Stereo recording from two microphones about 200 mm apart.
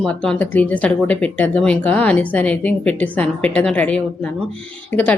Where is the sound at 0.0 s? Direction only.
5° left (ahead or behind).